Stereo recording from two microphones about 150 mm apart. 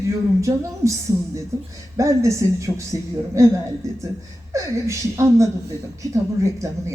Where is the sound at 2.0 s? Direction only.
20° right (ahead or behind).